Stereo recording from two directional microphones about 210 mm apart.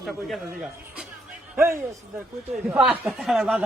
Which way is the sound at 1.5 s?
15° right (ahead or behind).